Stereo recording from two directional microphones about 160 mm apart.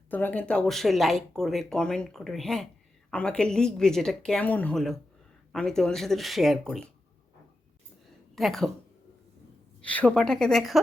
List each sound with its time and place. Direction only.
0.1 s speech: 10° left (ahead or behind)
8.4 s speech: centre (ahead or behind)
9.8 s speech: 10° left (ahead or behind)